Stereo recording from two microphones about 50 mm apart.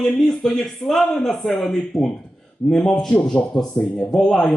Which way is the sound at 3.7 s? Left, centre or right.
Left.